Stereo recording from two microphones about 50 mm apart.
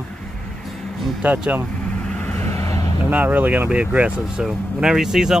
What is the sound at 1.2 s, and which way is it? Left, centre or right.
Speech, right.